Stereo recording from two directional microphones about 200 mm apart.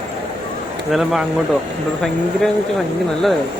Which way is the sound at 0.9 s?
Centre (ahead or behind).